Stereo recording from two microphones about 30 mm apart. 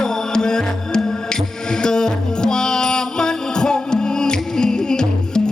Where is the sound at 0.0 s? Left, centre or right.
Left.